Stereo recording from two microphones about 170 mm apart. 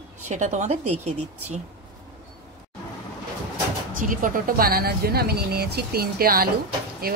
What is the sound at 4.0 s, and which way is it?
Speech, 55° right (ahead or behind).